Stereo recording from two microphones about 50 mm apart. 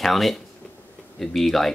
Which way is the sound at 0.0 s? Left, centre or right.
Centre.